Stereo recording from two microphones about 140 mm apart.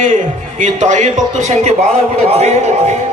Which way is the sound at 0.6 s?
60° right (ahead or behind).